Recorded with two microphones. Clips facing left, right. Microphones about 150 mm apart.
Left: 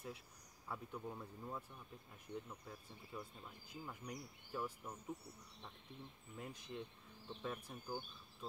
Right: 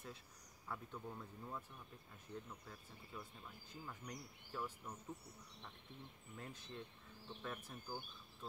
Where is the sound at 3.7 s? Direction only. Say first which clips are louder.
Left 2 dB; 10° left (ahead or behind).